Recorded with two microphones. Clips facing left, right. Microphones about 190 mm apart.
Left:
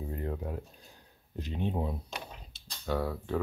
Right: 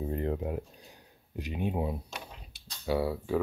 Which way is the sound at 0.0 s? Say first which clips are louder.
Right 5 dB; 25° right (ahead or behind).